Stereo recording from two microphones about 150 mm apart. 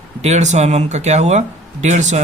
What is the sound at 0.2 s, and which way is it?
A man's voice, 50° right (ahead or behind).